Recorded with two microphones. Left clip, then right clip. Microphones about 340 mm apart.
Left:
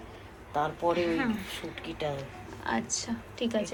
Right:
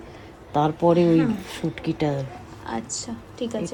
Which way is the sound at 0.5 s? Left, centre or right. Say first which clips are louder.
Right 9 dB; right.